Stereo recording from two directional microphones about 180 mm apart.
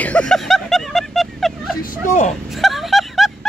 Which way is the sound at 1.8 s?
45° left (ahead or behind).